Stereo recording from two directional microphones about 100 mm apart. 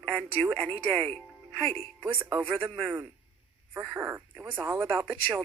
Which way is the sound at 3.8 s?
15° right (ahead or behind).